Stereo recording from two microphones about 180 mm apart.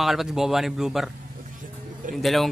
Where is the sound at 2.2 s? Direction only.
Centre (ahead or behind).